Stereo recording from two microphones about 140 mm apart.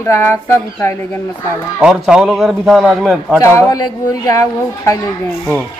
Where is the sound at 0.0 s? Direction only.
20° left (ahead or behind).